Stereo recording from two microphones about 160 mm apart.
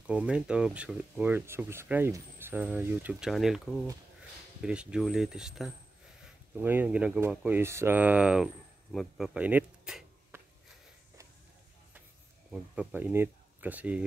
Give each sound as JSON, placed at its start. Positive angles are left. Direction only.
{"t": 0.0, "sound": "speech", "side_deg": -5}
{"t": 10.3, "sound": "sniff", "side_deg": -15}
{"t": 12.4, "sound": "speech", "side_deg": -5}